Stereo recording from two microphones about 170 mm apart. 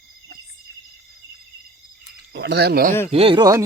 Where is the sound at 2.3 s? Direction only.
85° right; by 2.9 s 60° right (ahead or behind).